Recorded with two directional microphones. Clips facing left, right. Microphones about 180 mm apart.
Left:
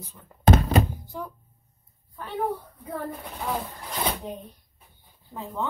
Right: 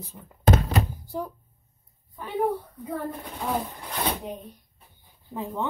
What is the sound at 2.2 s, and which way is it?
Speech, 15° right (ahead or behind).